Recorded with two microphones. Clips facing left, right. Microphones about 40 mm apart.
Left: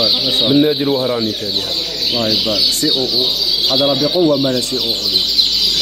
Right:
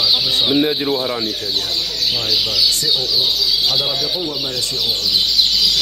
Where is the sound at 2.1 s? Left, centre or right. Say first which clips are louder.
Left 4 dB; left.